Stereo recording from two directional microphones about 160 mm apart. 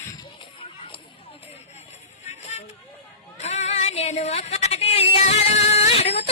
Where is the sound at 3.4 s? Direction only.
45° left (ahead or behind).